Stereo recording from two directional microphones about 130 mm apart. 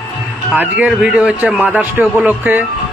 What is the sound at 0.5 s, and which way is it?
A man's voice, 10° right (ahead or behind).